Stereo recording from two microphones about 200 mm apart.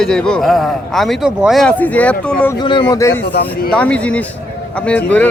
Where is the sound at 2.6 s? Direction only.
25° left (ahead or behind).